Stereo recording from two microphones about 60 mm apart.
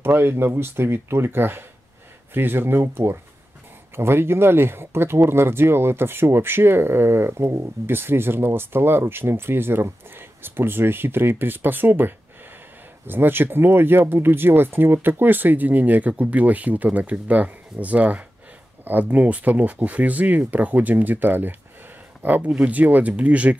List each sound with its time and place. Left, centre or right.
0.0 s speech: right